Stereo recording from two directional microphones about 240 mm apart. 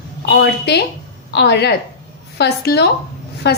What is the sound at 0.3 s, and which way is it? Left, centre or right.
A woman's voice, left.